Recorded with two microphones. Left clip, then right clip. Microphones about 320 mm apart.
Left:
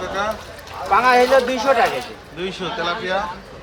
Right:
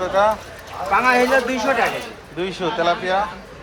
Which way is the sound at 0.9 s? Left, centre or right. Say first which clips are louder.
Left 2 dB; left.